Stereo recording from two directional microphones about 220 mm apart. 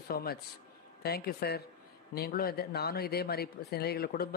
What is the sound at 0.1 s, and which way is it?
Speech, 45° left (ahead or behind).